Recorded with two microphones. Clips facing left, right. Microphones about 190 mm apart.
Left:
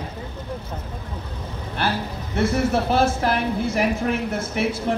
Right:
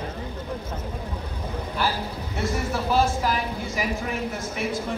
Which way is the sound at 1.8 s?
75° left (ahead or behind).